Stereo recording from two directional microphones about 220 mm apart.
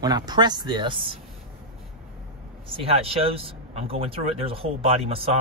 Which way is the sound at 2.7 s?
25° right (ahead or behind).